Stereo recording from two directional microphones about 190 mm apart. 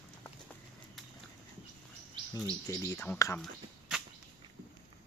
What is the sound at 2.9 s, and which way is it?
Speech, 15° left (ahead or behind).